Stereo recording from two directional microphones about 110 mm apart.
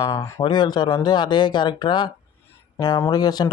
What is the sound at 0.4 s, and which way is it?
Speech, 40° left (ahead or behind).